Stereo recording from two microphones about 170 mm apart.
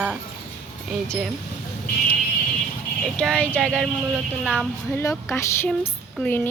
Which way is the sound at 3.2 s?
5° left (ahead or behind).